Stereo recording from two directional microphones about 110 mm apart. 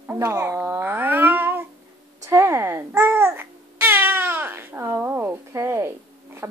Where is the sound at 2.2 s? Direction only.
25° right (ahead or behind).